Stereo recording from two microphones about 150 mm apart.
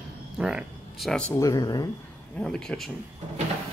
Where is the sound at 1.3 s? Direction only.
25° left (ahead or behind).